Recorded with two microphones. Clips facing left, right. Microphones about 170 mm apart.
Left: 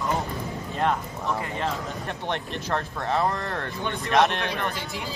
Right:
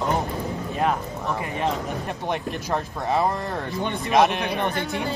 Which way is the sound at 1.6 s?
10° right (ahead or behind).